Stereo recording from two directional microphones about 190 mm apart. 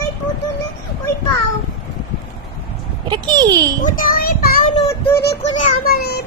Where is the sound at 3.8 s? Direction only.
50° left (ahead or behind).